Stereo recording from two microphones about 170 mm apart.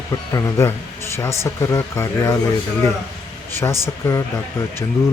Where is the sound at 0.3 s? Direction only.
20° left (ahead or behind).